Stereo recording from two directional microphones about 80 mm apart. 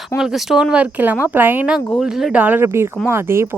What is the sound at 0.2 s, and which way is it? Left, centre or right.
Speech, centre.